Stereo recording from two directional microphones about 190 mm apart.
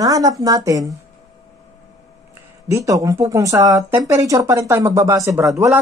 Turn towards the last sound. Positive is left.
turn(degrees=-15)  # may be behind; listen again after turning